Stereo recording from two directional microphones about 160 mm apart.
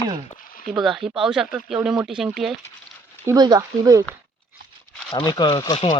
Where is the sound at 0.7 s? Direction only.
Centre (ahead or behind).